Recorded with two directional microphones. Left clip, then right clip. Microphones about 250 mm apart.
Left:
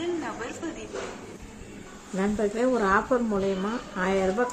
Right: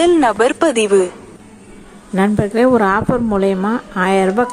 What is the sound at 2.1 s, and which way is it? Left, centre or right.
A woman's voice, right.